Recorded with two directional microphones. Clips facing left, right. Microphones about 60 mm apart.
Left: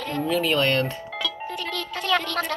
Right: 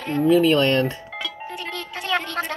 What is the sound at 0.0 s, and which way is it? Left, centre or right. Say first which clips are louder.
Speech: right 7 dB; right.